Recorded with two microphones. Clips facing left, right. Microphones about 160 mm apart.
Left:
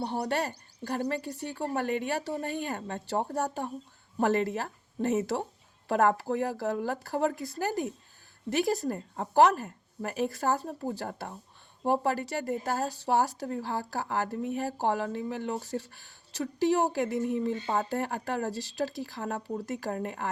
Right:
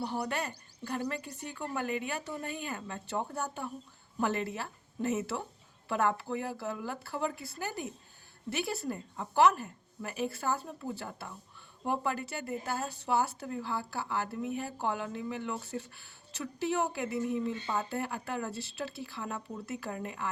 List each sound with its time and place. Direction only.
0.0 s speech: 35° left (ahead or behind)